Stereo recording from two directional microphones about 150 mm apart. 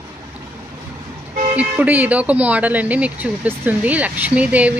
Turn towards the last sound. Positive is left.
turn(degrees=-10)  # may be behind; listen again after turning